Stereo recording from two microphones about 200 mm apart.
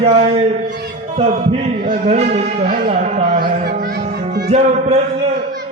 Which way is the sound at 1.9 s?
35° right (ahead or behind).